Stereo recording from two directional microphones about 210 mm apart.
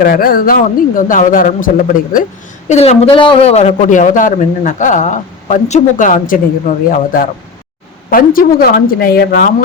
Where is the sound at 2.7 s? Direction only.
30° left (ahead or behind).